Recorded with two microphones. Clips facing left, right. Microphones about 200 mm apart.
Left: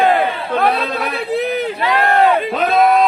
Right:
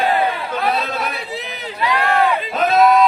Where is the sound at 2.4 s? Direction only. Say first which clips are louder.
Even; 55° left (ahead or behind).